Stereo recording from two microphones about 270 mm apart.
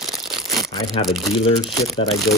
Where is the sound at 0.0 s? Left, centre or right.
Centre.